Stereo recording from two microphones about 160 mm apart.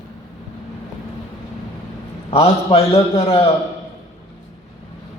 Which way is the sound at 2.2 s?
35° left (ahead or behind).